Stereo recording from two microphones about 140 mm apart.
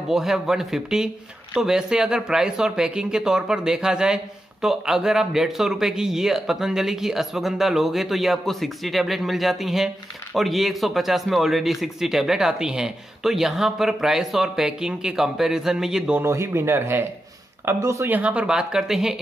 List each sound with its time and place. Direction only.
0.1 s speech: 5° right (ahead or behind)
16.2 s speech: 20° right (ahead or behind); by 19.1 s 5° right (ahead or behind)